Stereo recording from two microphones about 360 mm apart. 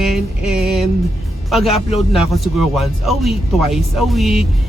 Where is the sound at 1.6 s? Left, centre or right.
Centre.